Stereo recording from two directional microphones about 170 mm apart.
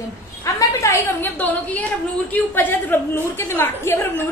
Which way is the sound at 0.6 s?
15° left (ahead or behind).